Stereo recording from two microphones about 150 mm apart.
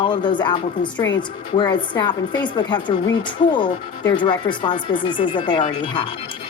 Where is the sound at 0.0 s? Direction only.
30° left (ahead or behind).